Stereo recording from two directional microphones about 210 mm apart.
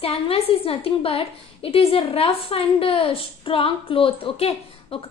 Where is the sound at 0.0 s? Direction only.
25° left (ahead or behind).